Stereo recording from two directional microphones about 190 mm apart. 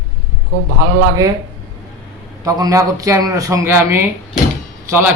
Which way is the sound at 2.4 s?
20° right (ahead or behind).